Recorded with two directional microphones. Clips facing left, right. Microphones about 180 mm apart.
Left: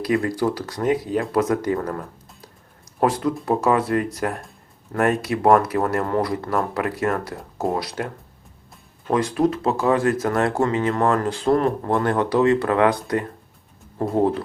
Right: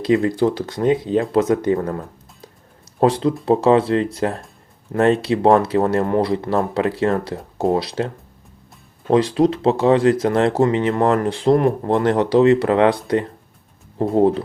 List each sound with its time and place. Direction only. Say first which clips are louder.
0.0 s speech: right 4 dB; 25° right (ahead or behind)